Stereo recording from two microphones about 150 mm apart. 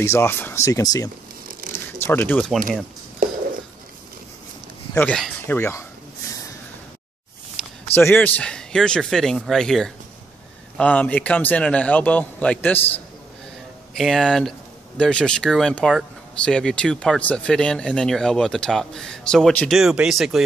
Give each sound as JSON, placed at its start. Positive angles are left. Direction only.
{"t": 0.0, "sound": "speech", "side_deg": 15}
{"t": 1.5, "sound": "zipper", "side_deg": -65}
{"t": 2.0, "sound": "speech", "side_deg": 15}
{"t": 4.9, "sound": "speech", "side_deg": 5}
{"t": 5.6, "sound": "speech", "side_deg": 20}
{"t": 7.6, "sound": "a sound", "side_deg": 0}
{"t": 7.9, "sound": "a man's voice", "side_deg": 15}
{"t": 13.9, "sound": "speech", "side_deg": 5}